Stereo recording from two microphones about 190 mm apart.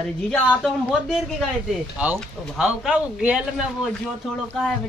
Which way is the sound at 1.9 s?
10° right (ahead or behind).